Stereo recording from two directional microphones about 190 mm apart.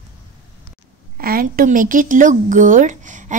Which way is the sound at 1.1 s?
50° right (ahead or behind).